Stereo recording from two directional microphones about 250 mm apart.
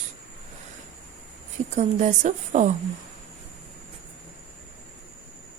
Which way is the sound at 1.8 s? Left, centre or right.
Right.